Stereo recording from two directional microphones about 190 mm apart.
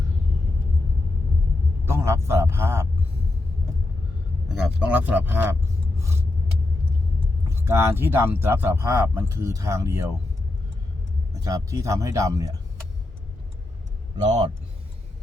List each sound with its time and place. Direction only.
1.8 s a man's voice: 15° right (ahead or behind)
4.4 s speech: 5° right (ahead or behind)
7.4 s speech: 15° right (ahead or behind)
11.4 s speech: 15° right (ahead or behind)